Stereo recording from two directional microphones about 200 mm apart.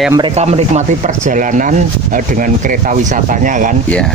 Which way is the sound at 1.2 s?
40° right (ahead or behind).